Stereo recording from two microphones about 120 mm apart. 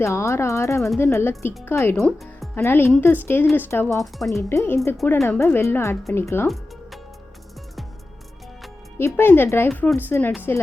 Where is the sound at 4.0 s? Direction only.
Centre (ahead or behind).